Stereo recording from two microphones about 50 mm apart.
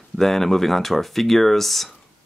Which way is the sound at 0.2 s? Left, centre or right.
Centre.